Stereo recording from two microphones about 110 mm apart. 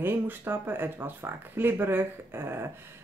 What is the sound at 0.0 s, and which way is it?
Speech, 20° right (ahead or behind).